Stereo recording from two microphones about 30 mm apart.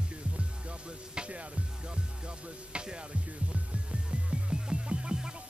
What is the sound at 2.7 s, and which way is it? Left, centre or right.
Music, right.